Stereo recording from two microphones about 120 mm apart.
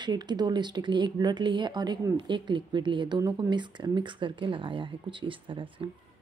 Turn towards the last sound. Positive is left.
turn(degrees=-45)  # may be behind; listen again after turning